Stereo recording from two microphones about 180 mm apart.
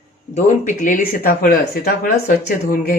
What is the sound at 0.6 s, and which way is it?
Speech, 45° left (ahead or behind).